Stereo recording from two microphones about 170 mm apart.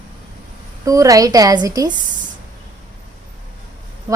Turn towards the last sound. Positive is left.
turn(degrees=-20)  # may be behind; listen again after turning